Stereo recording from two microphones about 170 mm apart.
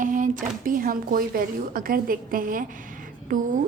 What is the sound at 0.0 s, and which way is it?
A woman's voice, 50° right (ahead or behind).